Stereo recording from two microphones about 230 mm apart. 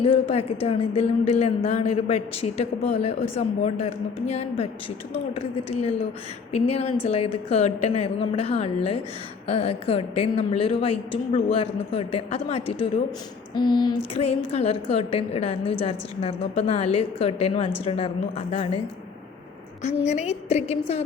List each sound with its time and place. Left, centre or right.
0.0 s a woman's voice: left
19.8 s a woman's voice: left